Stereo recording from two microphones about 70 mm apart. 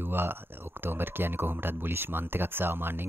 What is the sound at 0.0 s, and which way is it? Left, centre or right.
Speech, right.